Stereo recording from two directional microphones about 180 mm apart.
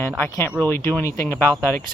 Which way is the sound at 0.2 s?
10° left (ahead or behind).